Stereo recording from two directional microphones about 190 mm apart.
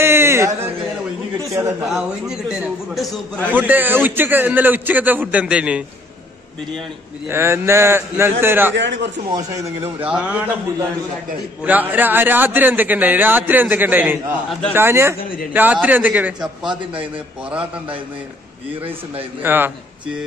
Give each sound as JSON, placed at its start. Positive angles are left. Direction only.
{"t": 0.0, "sound": "a sound", "side_deg": -10}
{"t": 1.5, "sound": "a man's voice", "side_deg": -15}
{"t": 1.9, "sound": "a man's voice", "side_deg": 0}
{"t": 3.5, "sound": "speech", "side_deg": -10}
{"t": 7.2, "sound": "speech", "side_deg": -15}
{"t": 8.7, "sound": "a man's voice", "side_deg": -70}
{"t": 9.5, "sound": "speech", "side_deg": -15}
{"t": 11.6, "sound": "speech", "side_deg": -10}
{"t": 19.4, "sound": "speech", "side_deg": -10}